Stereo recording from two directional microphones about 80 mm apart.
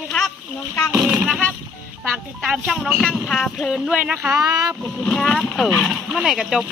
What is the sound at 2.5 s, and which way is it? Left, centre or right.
Speech, centre.